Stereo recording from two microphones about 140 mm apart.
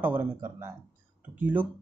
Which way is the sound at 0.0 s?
15° right (ahead or behind).